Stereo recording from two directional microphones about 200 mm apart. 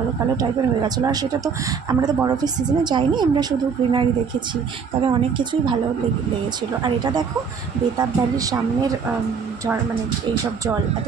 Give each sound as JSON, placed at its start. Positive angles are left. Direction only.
{"t": 0.4, "sound": "a woman's voice", "side_deg": -20}
{"t": 5.0, "sound": "a woman's voice", "side_deg": -25}
{"t": 8.0, "sound": "a woman's voice", "side_deg": -20}